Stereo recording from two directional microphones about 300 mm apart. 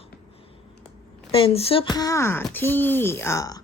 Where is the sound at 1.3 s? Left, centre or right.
Centre.